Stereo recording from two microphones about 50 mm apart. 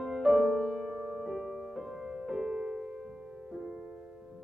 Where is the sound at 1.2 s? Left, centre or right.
Centre.